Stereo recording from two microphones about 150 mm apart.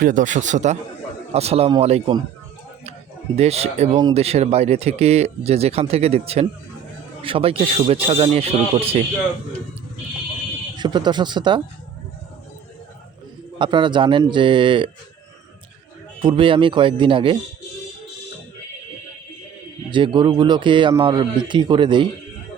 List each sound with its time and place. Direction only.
0.0 s a man's voice: 60° right (ahead or behind); by 2.1 s 40° right (ahead or behind)
3.3 s speech: 45° right (ahead or behind)
10.8 s speech: 30° right (ahead or behind)
13.6 s speech: 35° right (ahead or behind)
16.2 s speech: 35° right (ahead or behind)
19.9 s speech: 30° right (ahead or behind)